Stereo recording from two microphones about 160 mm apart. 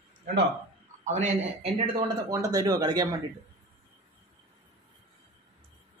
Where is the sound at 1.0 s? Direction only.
50° right (ahead or behind).